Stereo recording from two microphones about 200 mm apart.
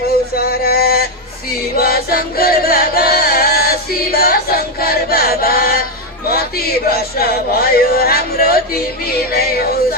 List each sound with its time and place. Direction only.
0.3 s a sound: 50° left (ahead or behind)
1.8 s music: 50° left (ahead or behind)
6.8 s speech: 50° left (ahead or behind)